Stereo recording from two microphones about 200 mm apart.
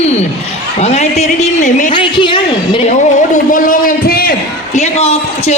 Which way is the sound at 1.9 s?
25° left (ahead or behind).